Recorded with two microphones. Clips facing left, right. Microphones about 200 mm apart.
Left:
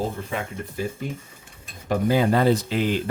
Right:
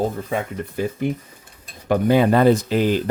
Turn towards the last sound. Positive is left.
turn(degrees=-40)  # may be behind; listen again after turning